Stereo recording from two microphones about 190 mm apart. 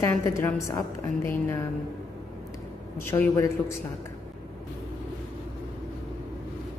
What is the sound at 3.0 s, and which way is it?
Speech, 15° left (ahead or behind).